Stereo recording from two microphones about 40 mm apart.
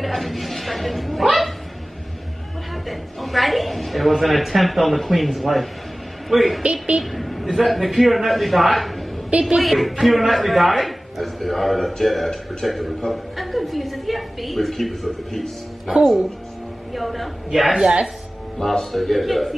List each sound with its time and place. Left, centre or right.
0.0 s speech: centre
2.9 s a man's voice: centre
6.6 s a woman's voice: right
7.0 s a man's voice: centre